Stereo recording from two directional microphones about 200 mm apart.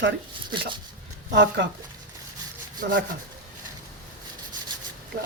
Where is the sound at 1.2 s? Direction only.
60° right (ahead or behind).